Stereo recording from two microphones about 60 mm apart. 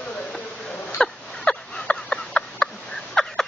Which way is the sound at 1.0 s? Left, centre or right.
Centre.